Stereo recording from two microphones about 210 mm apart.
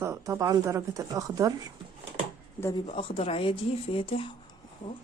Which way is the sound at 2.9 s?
25° left (ahead or behind).